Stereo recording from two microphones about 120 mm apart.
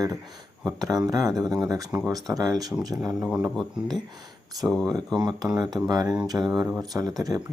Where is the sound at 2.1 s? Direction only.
30° right (ahead or behind).